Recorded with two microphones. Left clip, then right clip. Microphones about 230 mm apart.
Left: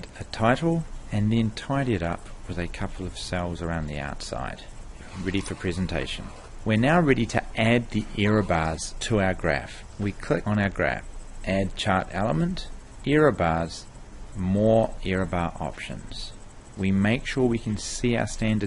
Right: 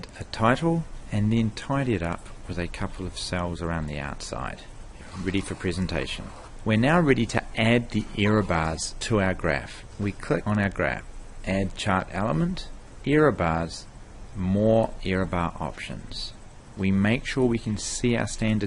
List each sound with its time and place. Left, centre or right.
0.0 s speech: centre